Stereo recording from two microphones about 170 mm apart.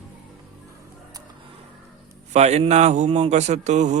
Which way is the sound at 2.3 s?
40° right (ahead or behind).